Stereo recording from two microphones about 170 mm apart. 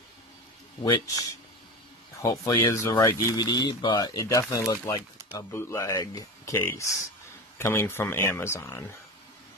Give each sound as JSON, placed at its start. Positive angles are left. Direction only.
{"t": 0.8, "sound": "speech", "side_deg": 20}
{"t": 2.2, "sound": "speech", "side_deg": 20}